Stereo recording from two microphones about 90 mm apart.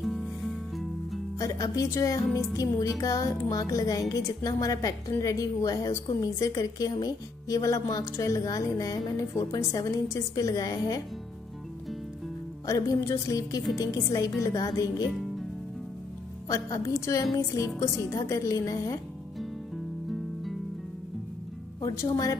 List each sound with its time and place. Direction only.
0.0 s music: centre (ahead or behind)
1.4 s music: 40° left (ahead or behind)
12.6 s music: 40° left (ahead or behind)
16.8 s music: 35° left (ahead or behind)
21.8 s a woman's voice: 45° left (ahead or behind)